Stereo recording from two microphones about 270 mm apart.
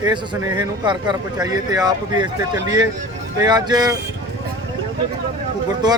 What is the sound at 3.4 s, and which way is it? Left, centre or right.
Speech, centre.